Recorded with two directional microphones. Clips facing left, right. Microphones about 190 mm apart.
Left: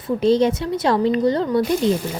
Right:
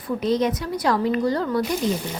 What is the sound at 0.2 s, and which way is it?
Speech, 30° left (ahead or behind).